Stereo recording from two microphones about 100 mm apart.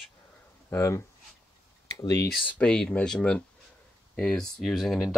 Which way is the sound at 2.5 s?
10° left (ahead or behind).